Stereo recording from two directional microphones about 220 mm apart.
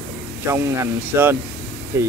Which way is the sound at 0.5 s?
10° right (ahead or behind).